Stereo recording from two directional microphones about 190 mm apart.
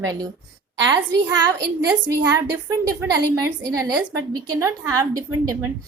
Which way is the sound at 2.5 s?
15° right (ahead or behind).